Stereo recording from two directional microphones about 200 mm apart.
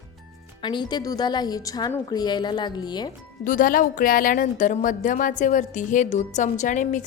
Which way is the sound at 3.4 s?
40° left (ahead or behind).